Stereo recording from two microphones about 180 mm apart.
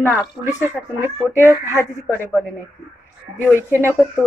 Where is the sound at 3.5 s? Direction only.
15° right (ahead or behind).